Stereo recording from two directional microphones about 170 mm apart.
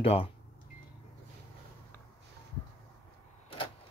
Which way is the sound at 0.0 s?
35° left (ahead or behind).